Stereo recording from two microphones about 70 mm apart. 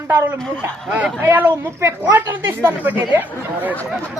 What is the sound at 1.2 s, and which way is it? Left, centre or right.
Speech, right.